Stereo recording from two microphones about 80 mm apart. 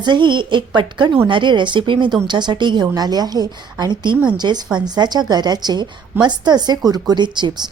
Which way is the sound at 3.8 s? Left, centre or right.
Right.